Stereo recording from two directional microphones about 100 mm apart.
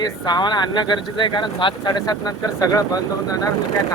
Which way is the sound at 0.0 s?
45° left (ahead or behind).